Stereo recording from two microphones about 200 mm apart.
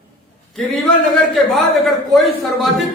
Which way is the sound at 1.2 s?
Centre (ahead or behind).